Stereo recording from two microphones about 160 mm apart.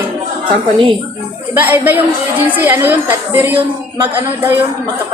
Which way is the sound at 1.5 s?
15° right (ahead or behind).